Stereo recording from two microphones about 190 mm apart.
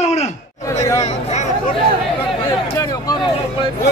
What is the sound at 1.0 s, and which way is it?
Speech, 35° left (ahead or behind).